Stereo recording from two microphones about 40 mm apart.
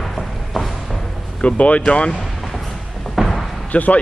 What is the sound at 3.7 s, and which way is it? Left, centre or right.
Speech, left.